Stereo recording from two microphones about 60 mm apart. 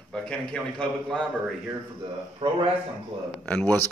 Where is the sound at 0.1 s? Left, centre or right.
Centre.